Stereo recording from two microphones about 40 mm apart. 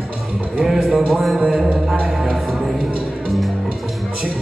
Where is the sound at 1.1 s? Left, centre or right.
Centre.